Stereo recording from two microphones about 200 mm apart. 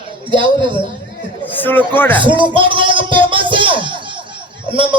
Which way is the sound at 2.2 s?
25° right (ahead or behind).